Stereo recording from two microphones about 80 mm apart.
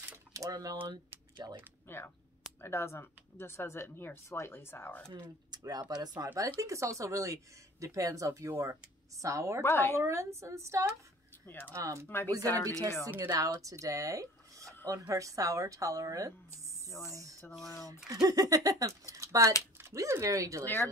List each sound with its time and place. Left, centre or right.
0.3 s speech: right
1.9 s speech: left
5.5 s speech: right
9.6 s speech: left
9.9 s speech: right
11.4 s speech: left
11.7 s speech: right
12.3 s speech: right
19.1 s a sound: right
19.8 s speech: right
20.6 s speech: left